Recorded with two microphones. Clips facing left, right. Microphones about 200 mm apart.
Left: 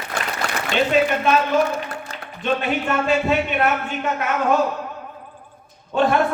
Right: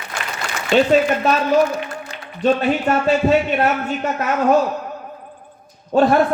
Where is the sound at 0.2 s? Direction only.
60° left (ahead or behind).